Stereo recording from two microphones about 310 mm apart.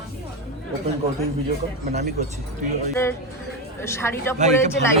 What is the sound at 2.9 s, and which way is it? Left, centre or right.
A woman's voice, centre.